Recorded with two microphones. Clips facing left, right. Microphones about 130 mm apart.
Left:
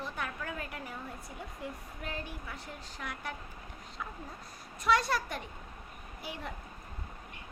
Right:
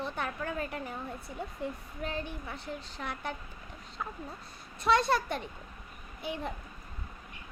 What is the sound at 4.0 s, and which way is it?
Speech, 40° right (ahead or behind).